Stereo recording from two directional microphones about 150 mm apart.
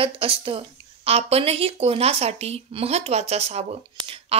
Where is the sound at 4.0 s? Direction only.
40° right (ahead or behind).